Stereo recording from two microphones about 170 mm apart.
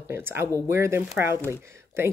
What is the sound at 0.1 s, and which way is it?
Speech, 15° right (ahead or behind).